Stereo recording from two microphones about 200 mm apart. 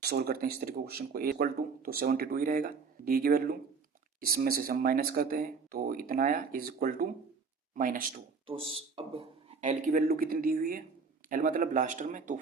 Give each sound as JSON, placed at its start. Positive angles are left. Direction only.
{"t": 0.0, "sound": "speech", "side_deg": -50}
{"t": 8.4, "sound": "a man's voice", "side_deg": -25}